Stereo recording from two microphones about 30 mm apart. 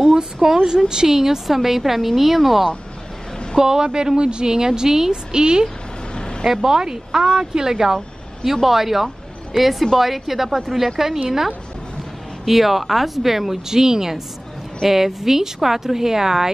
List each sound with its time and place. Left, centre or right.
0.1 s a sound: centre
0.8 s a woman's voice: right; by 2.7 s centre
3.5 s a woman's voice: right
6.1 s vehicle: left
6.4 s a woman's voice: centre